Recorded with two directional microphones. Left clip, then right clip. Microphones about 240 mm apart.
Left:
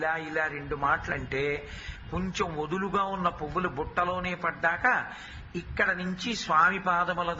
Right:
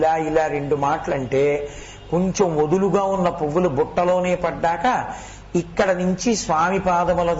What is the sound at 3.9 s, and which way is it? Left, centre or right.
A man's voice, centre.